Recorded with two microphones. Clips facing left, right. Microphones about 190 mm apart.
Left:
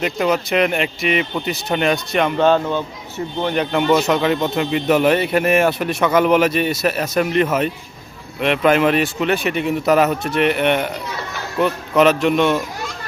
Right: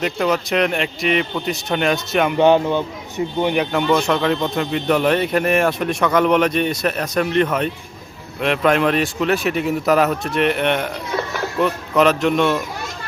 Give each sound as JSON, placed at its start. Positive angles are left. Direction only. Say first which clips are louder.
{"t": 0.0, "sound": "speech", "louder": "left 1 dB", "side_deg": 0}
{"t": 2.4, "sound": "speech", "louder": "right 3 dB", "side_deg": -15}
{"t": 3.7, "sound": "speech", "louder": "left 2 dB", "side_deg": 5}